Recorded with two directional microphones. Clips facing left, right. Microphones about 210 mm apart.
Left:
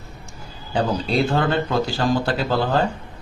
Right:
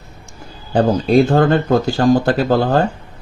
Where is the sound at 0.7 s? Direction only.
50° right (ahead or behind).